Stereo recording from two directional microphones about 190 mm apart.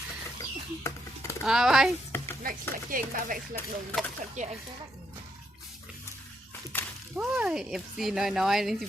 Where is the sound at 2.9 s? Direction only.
45° right (ahead or behind).